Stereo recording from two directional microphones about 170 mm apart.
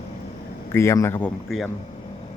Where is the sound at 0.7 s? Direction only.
15° left (ahead or behind).